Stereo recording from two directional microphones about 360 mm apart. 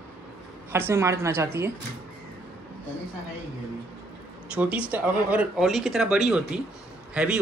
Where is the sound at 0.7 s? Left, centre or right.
Centre.